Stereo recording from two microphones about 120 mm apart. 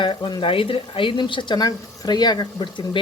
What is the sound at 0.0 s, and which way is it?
Speech, 40° left (ahead or behind).